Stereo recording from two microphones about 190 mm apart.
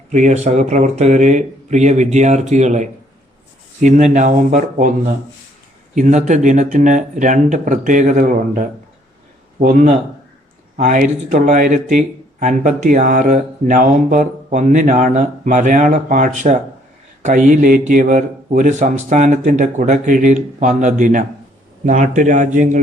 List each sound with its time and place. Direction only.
0.1 s speech: 40° right (ahead or behind)